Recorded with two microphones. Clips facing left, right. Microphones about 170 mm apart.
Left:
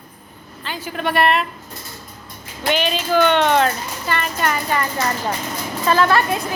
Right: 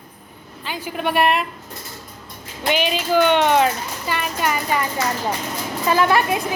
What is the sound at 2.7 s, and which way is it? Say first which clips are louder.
A woman's voice: even; 10° right (ahead or behind).